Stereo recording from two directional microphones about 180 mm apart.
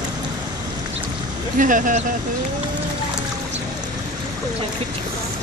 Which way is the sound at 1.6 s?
50° right (ahead or behind).